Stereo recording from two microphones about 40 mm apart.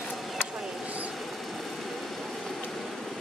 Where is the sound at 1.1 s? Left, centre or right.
Centre.